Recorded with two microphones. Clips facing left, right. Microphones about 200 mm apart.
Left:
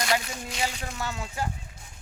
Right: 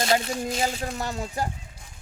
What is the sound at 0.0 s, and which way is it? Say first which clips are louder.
Speech: right 5 dB; 30° right (ahead or behind).